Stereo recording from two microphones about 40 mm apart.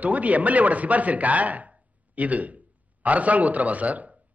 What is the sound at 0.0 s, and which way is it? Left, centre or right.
A man's voice, right.